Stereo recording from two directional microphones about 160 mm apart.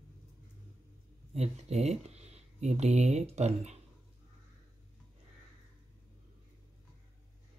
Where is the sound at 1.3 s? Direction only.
40° right (ahead or behind).